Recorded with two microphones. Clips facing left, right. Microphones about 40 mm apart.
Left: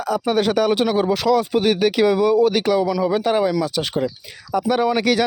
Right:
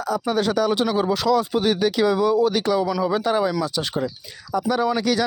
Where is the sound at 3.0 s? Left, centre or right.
Centre.